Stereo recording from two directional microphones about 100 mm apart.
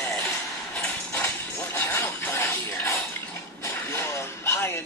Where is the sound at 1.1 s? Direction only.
20° left (ahead or behind).